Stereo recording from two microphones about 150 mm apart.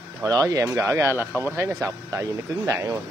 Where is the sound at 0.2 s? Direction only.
25° right (ahead or behind).